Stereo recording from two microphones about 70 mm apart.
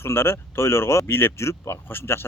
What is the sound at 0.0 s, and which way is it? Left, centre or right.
A man's voice, left.